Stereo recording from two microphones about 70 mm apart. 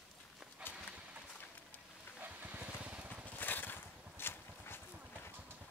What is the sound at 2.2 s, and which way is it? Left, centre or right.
Vehicle, right.